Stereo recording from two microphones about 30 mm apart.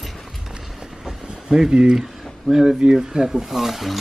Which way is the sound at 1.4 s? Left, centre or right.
Centre.